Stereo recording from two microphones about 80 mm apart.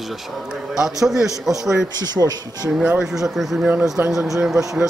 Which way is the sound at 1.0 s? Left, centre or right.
Centre.